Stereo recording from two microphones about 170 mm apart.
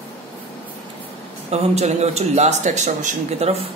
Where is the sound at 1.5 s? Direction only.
40° right (ahead or behind).